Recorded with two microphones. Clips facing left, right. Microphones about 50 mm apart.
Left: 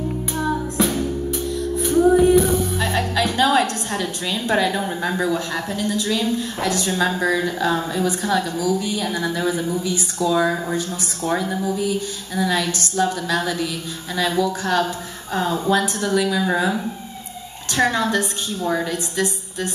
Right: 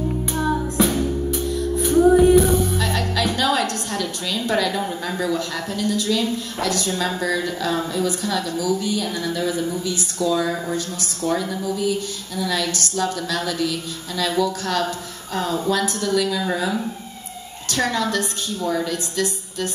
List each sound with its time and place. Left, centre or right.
2.8 s a woman's voice: left
17.6 s a woman's voice: left